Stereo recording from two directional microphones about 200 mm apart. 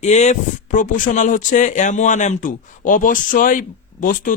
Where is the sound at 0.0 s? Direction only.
35° left (ahead or behind).